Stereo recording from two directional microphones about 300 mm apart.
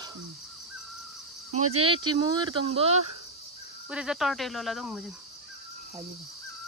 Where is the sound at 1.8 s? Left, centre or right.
Centre.